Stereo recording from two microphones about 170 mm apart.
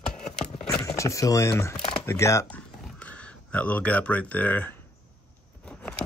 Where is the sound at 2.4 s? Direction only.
10° left (ahead or behind).